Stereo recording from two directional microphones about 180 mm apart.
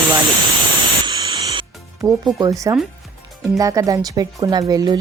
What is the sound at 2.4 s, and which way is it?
Speech, 20° right (ahead or behind).